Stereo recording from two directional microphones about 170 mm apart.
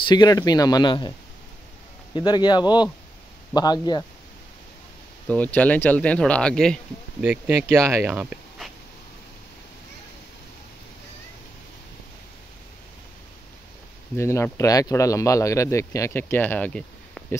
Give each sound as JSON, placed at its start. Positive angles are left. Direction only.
{"t": 0.1, "sound": "speech", "side_deg": 25}
{"t": 2.1, "sound": "speech", "side_deg": 25}
{"t": 5.3, "sound": "speech", "side_deg": 10}
{"t": 7.2, "sound": "speech", "side_deg": -10}
{"t": 14.1, "sound": "speech", "side_deg": 15}